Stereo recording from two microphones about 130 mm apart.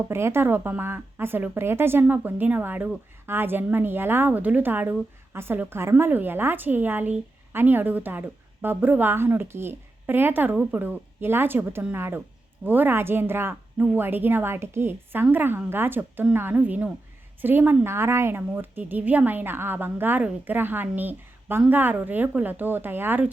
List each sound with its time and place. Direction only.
0.1 s speech: 20° right (ahead or behind)